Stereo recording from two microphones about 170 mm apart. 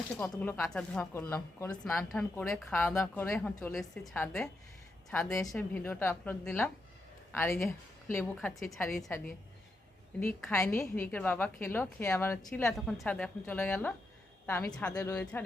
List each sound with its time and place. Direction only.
0.2 s a woman's voice: 10° left (ahead or behind)
2.7 s a woman's voice: 15° left (ahead or behind)
10.2 s a woman's voice: 15° left (ahead or behind)
12.5 s a woman's voice: 5° left (ahead or behind)